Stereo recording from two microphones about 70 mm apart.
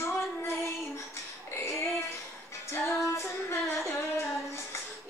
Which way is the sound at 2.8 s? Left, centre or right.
Left.